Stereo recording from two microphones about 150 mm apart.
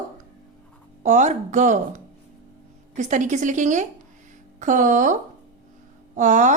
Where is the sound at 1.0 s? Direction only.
55° right (ahead or behind).